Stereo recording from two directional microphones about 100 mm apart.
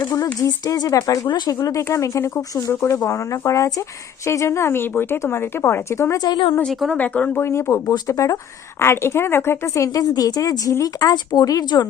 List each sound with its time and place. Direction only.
0.0 s a sound: 30° left (ahead or behind)
0.3 s a woman's voice: 40° left (ahead or behind)
6.1 s a woman's voice: 45° left (ahead or behind)
6.6 s speech: 5° left (ahead or behind)
6.9 s speech: 15° left (ahead or behind)
7.4 s a woman's voice: 30° left (ahead or behind)